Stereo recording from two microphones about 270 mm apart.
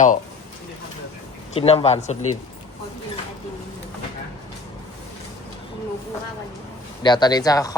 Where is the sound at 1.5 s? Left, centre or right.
Left.